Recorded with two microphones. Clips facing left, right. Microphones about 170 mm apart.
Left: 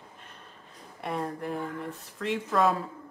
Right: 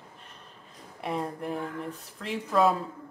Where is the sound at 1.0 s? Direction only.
Centre (ahead or behind).